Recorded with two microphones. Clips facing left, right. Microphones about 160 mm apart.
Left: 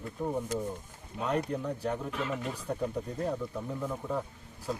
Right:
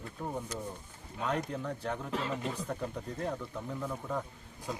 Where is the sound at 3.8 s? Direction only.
10° left (ahead or behind).